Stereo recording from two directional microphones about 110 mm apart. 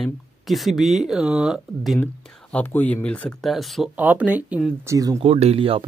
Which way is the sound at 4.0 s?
15° right (ahead or behind).